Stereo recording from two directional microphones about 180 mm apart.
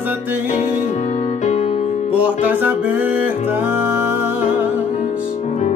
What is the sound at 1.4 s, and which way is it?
Music, 40° left (ahead or behind).